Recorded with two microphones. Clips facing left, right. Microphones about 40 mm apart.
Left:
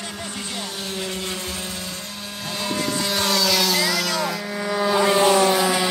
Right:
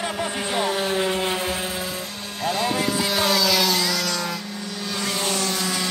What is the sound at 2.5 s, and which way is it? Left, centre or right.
Vehicle, centre.